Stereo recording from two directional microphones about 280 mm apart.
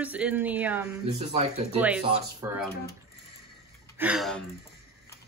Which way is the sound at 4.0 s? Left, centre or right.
Centre.